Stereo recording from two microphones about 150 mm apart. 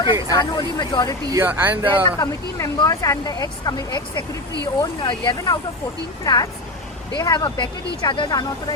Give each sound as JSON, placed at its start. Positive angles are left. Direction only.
{"t": 0.0, "sound": "speech", "side_deg": 25}
{"t": 1.3, "sound": "speech", "side_deg": -15}
{"t": 2.1, "sound": "speech", "side_deg": 20}